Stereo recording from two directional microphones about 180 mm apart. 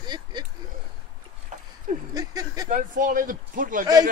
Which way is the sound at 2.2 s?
20° right (ahead or behind).